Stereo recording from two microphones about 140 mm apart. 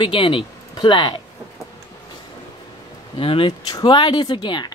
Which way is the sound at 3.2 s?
40° left (ahead or behind).